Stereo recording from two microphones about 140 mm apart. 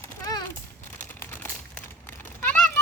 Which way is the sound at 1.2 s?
15° left (ahead or behind).